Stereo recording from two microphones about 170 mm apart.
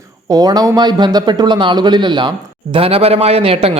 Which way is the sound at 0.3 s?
20° right (ahead or behind).